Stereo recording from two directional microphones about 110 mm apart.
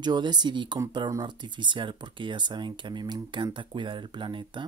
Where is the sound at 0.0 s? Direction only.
40° right (ahead or behind).